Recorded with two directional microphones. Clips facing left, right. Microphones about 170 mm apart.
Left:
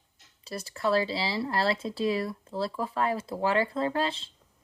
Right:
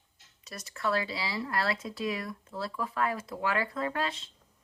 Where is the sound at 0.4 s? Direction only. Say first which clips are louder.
Left 4 dB; 30° left (ahead or behind).